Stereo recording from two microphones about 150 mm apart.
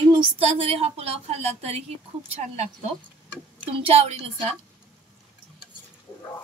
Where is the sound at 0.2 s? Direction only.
40° right (ahead or behind).